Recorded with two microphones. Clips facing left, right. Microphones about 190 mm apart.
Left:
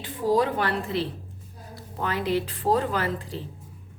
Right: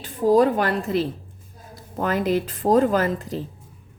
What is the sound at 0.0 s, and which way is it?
A woman's voice, 45° right (ahead or behind).